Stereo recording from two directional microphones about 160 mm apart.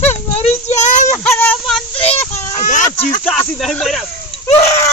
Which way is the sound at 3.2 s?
10° left (ahead or behind).